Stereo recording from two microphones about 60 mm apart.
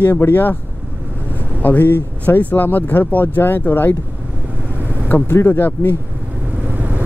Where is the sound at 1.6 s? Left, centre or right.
Left.